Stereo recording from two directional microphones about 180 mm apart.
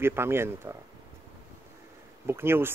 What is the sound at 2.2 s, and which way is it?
Speech, 15° right (ahead or behind).